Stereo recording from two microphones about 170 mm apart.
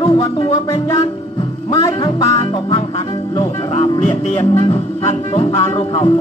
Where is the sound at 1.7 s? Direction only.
20° left (ahead or behind).